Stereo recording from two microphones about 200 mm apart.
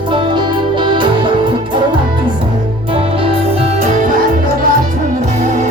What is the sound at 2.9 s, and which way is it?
Music, 30° right (ahead or behind).